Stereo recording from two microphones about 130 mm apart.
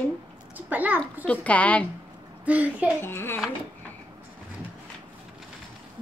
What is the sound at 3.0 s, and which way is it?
Speech, 15° left (ahead or behind).